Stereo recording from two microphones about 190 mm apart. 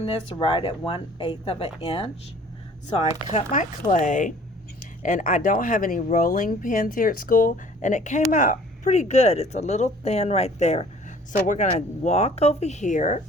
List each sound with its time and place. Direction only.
0.0 s speech: 25° left (ahead or behind)
3.3 s speech: 40° left (ahead or behind)